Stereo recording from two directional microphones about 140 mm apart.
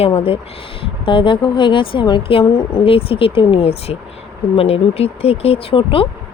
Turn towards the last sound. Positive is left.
turn(degrees=40)  # may be behind; listen again after turning